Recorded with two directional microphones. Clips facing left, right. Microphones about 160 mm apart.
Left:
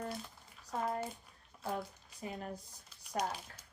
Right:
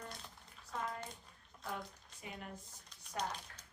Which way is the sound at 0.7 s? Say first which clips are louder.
Left 6 dB; 40° left (ahead or behind).